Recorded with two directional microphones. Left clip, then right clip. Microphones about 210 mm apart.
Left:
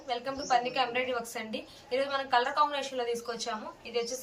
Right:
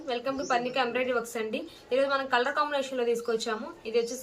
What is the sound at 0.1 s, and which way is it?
A woman's voice, 15° right (ahead or behind).